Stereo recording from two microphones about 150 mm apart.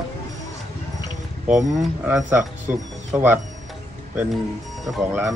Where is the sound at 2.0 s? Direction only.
10° right (ahead or behind).